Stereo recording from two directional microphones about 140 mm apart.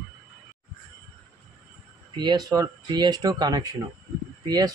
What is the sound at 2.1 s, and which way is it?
Speech, 30° right (ahead or behind).